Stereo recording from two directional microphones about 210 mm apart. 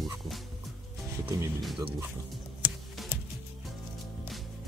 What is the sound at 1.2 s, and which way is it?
Speech, 15° right (ahead or behind).